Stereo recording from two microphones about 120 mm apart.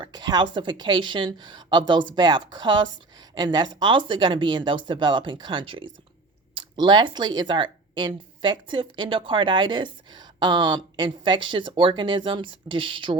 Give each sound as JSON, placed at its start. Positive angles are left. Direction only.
{"t": 0.0, "sound": "a woman's voice", "side_deg": -35}